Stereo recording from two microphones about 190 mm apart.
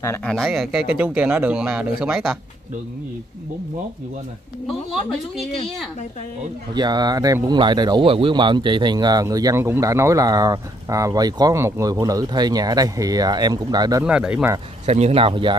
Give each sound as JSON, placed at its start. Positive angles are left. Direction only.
{"t": 0.0, "sound": "speech", "side_deg": 15}
{"t": 0.3, "sound": "speech", "side_deg": 0}
{"t": 6.7, "sound": "speech", "side_deg": -20}
{"t": 14.0, "sound": "speech", "side_deg": -5}
{"t": 14.9, "sound": "speech", "side_deg": -35}